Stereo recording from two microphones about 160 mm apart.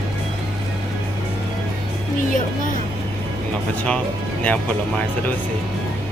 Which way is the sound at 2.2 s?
55° left (ahead or behind).